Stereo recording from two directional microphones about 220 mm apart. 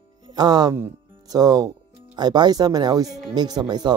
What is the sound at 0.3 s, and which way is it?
Speech, 20° right (ahead or behind).